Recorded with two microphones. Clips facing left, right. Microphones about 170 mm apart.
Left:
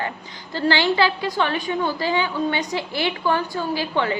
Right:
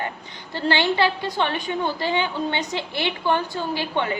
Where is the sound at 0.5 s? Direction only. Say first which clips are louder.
Left 2 dB; 20° right (ahead or behind).